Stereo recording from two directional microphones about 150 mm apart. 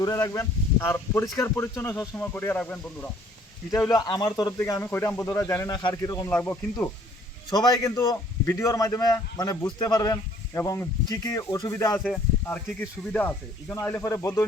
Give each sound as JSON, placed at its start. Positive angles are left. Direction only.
{"t": 0.0, "sound": "speech", "side_deg": 25}
{"t": 3.7, "sound": "a man's voice", "side_deg": 20}
{"t": 6.3, "sound": "speech", "side_deg": 10}
{"t": 7.5, "sound": "a man's voice", "side_deg": 25}